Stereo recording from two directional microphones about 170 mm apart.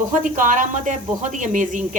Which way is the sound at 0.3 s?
50° right (ahead or behind).